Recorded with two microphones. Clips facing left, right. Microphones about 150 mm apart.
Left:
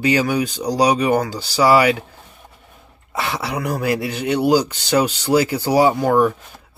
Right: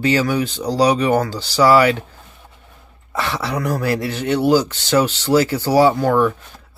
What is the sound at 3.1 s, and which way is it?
Speech, 10° left (ahead or behind).